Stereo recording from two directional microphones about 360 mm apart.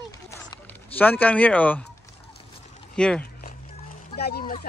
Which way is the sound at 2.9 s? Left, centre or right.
Centre.